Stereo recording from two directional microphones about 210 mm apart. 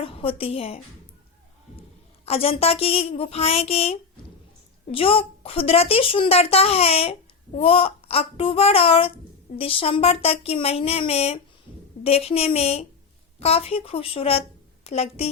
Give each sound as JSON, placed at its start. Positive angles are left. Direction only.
{"t": 0.0, "sound": "a woman's voice", "side_deg": 25}
{"t": 2.2, "sound": "a woman's voice", "side_deg": 30}